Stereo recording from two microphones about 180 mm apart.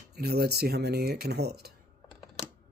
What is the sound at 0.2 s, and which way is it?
Speech, 60° right (ahead or behind).